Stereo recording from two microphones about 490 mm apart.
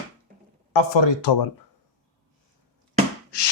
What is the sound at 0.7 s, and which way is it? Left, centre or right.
Speech, left.